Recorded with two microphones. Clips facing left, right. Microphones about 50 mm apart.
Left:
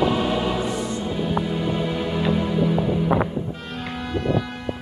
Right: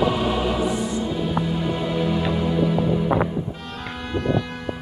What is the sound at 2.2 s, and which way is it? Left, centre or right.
Music, centre.